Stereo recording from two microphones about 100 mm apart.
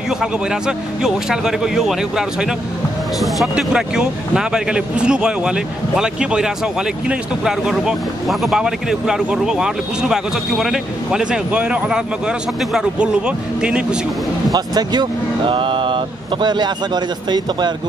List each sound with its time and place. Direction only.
0.2 s a man's voice: 5° right (ahead or behind)
14.5 s speech: 45° right (ahead or behind)